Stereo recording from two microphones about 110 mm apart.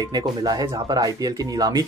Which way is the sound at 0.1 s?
35° right (ahead or behind).